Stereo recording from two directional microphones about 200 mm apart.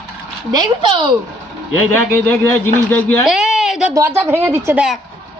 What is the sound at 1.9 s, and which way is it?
Speech, 15° left (ahead or behind).